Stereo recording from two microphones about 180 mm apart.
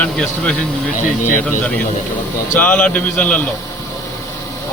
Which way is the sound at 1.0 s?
45° left (ahead or behind).